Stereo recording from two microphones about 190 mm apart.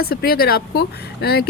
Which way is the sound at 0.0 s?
55° left (ahead or behind).